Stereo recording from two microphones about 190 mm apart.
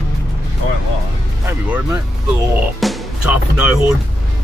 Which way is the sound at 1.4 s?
15° right (ahead or behind).